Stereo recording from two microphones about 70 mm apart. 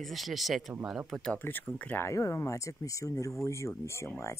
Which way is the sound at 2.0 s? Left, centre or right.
Left.